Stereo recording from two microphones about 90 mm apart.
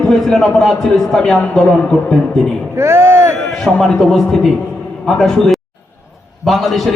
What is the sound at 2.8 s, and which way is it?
Speech, 30° right (ahead or behind).